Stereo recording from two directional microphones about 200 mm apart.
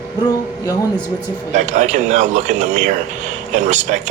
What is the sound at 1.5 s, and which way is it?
Speech, 35° right (ahead or behind).